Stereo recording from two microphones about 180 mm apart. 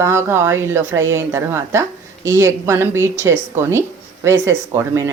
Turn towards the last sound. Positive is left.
turn(degrees=-15)  # may be behind; listen again after turning